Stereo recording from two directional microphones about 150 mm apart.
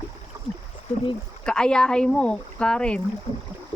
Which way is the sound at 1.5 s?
5° left (ahead or behind).